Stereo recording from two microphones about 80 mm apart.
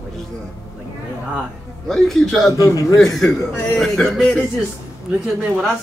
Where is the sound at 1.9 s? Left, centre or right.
Centre.